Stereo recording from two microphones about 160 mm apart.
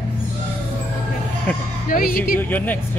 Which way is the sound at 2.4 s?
10° left (ahead or behind).